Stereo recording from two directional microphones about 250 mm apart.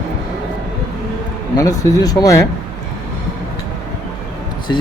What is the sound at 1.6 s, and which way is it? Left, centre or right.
Speech, centre.